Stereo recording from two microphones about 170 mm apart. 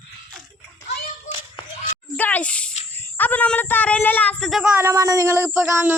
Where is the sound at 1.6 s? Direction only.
30° left (ahead or behind).